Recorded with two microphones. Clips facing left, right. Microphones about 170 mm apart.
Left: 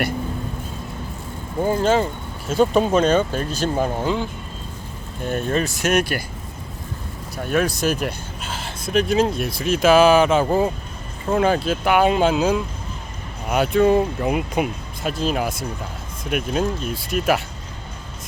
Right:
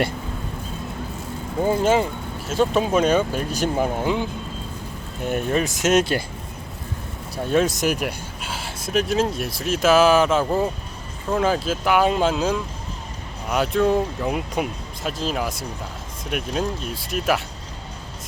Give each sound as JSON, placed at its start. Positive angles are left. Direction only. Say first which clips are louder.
{"t": 1.6, "sound": "speech", "louder": "even", "side_deg": -15}
{"t": 2.5, "sound": "speech", "louder": "left 3 dB", "side_deg": 0}
{"t": 7.4, "sound": "speech", "louder": "right 1 dB", "side_deg": -25}